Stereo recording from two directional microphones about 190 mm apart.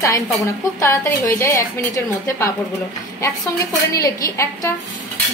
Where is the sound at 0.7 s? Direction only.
15° left (ahead or behind).